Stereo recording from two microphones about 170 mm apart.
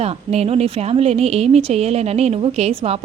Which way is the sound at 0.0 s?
35° right (ahead or behind).